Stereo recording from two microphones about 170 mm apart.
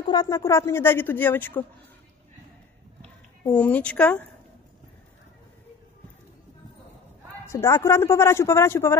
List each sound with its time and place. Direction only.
0.0 s a woman's voice: 25° left (ahead or behind)
3.0 s a sound: 10° left (ahead or behind)
7.4 s a woman's voice: 15° left (ahead or behind)